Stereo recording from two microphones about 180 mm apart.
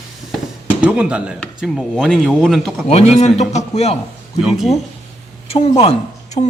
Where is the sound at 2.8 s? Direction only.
35° left (ahead or behind).